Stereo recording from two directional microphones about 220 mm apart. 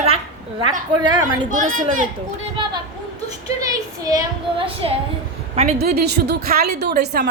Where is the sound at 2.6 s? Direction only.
25° right (ahead or behind).